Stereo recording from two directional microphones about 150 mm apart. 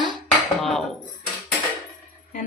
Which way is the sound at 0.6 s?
Centre (ahead or behind).